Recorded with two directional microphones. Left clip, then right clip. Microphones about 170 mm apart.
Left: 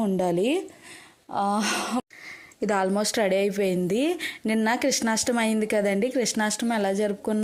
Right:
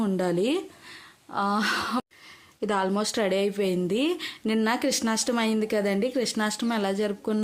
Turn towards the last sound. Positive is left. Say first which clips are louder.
# left 2 dB
turn(degrees=10)  # may be behind; listen again after turning